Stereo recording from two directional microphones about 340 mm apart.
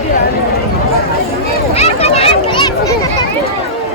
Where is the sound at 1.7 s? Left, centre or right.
Centre.